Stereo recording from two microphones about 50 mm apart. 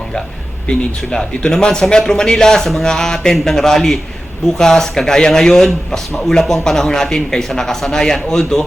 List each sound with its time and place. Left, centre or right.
0.7 s speech: centre